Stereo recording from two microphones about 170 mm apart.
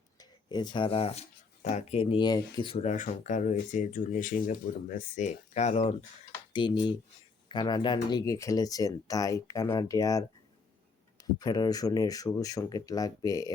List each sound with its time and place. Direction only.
0.2 s speech: 25° left (ahead or behind); by 5.9 s 40° left (ahead or behind)
6.5 s speech: 30° left (ahead or behind)